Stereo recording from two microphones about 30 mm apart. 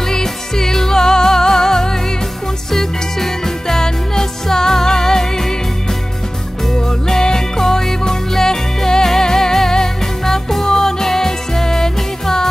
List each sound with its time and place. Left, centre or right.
0.1 s music: centre
7.3 s music: centre